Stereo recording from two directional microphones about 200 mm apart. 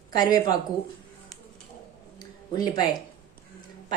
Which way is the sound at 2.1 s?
20° left (ahead or behind).